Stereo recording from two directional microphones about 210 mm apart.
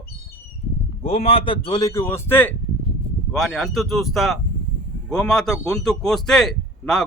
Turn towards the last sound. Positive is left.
turn(degrees=0)  # may be behind; listen again after turning